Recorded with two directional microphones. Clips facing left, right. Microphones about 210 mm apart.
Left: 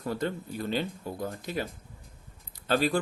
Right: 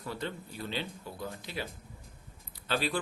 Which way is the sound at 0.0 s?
45° left (ahead or behind).